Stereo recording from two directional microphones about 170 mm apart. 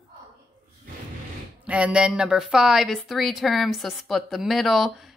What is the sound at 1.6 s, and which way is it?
Speech, 5° right (ahead or behind).